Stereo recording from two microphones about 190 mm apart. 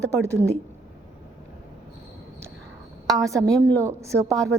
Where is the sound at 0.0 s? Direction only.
15° right (ahead or behind).